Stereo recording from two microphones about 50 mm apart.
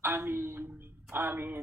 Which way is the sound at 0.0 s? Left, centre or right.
Right.